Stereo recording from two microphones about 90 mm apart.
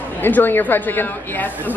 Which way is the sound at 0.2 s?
20° left (ahead or behind).